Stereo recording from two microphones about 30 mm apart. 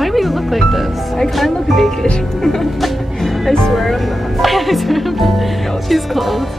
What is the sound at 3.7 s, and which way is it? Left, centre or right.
Speech, centre.